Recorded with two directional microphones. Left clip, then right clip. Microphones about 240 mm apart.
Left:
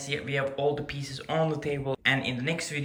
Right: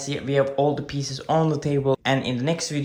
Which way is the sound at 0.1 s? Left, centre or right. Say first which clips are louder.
Right 7 dB; centre.